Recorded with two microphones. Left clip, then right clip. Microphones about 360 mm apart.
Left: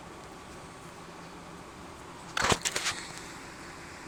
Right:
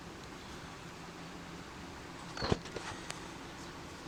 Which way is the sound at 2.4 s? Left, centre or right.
Left.